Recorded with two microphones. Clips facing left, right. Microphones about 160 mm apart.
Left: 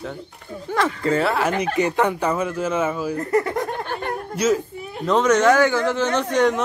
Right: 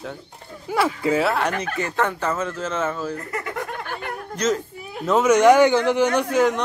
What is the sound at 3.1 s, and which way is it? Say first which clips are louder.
Snicker: left 8 dB; 35° left (ahead or behind).